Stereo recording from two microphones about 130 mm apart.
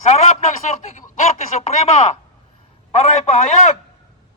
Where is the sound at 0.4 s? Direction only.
60° left (ahead or behind).